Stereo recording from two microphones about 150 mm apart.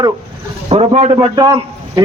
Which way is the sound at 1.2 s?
25° right (ahead or behind).